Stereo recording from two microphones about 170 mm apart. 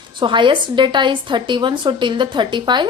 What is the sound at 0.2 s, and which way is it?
A woman's voice, 30° right (ahead or behind).